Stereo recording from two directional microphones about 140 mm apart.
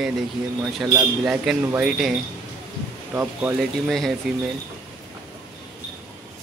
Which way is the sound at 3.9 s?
Centre (ahead or behind).